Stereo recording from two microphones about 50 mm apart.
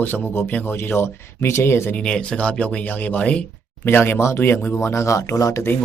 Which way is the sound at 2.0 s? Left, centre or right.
Centre.